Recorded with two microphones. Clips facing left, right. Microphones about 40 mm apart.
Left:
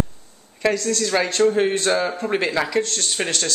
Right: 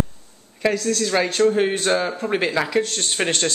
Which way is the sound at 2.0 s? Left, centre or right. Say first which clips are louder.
Even; centre.